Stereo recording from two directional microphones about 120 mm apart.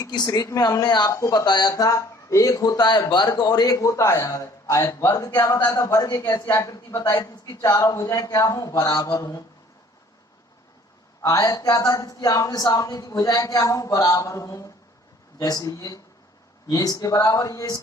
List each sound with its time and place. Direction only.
0.1 s speech: 35° left (ahead or behind)
11.2 s speech: 30° left (ahead or behind)